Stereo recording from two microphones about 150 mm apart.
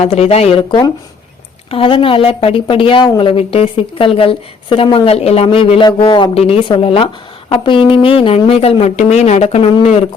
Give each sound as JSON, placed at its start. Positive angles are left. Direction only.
{"t": 0.0, "sound": "a woman's voice", "side_deg": 45}